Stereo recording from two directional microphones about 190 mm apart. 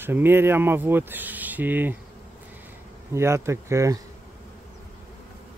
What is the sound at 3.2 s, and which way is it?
Speech, 15° right (ahead or behind).